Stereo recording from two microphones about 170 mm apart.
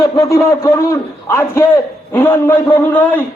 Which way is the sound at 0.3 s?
20° left (ahead or behind).